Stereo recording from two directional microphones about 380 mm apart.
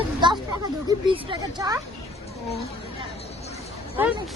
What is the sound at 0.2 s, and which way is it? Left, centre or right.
Speech, centre.